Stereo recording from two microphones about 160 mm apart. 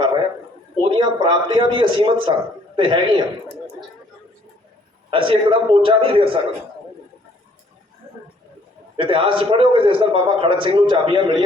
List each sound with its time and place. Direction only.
0.8 s a man's voice: 30° right (ahead or behind)
5.1 s a man's voice: 35° right (ahead or behind)
9.0 s a man's voice: 35° right (ahead or behind)